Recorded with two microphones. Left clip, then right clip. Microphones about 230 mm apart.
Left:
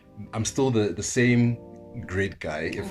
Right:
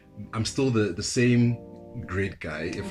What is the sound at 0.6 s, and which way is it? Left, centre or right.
Speech, left.